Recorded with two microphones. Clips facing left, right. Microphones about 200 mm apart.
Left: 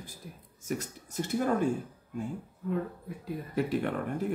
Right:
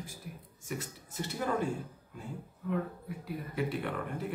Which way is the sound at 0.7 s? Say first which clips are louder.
Left 5 dB; 45° left (ahead or behind).